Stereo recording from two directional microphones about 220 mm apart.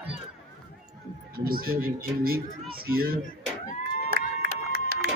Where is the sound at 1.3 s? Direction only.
40° right (ahead or behind).